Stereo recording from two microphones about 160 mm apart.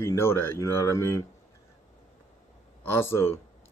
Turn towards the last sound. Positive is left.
turn(degrees=15)  # may be behind; listen again after turning